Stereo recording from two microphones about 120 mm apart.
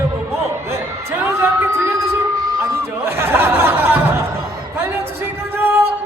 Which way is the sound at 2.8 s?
20° right (ahead or behind).